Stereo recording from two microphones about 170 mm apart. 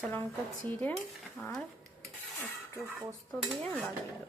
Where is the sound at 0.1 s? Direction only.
10° left (ahead or behind).